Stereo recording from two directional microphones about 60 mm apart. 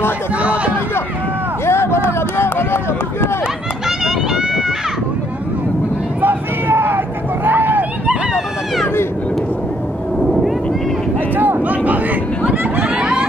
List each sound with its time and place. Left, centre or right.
1.7 s a sound: left
4.0 s run: centre
6.2 s vehicle: right
7.4 s a sound: right
11.3 s vehicle: right
12.9 s vehicle: centre